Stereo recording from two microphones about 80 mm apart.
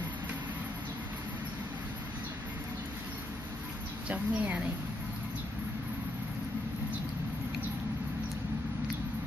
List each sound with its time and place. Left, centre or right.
4.1 s a woman's voice: centre